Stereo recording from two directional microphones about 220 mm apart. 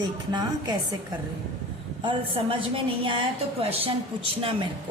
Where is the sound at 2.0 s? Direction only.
20° right (ahead or behind).